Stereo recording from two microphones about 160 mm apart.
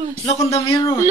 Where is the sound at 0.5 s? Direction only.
35° left (ahead or behind).